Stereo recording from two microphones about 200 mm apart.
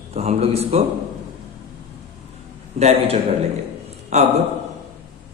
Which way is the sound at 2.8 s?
30° right (ahead or behind).